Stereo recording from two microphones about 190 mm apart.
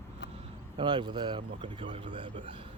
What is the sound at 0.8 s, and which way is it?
Speech, 25° right (ahead or behind).